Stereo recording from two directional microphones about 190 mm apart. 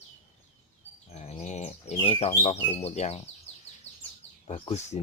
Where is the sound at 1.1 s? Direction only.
35° left (ahead or behind).